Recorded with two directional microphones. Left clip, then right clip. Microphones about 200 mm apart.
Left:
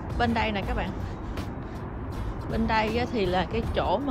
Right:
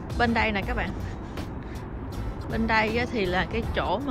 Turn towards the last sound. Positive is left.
turn(degrees=20)  # may be behind; listen again after turning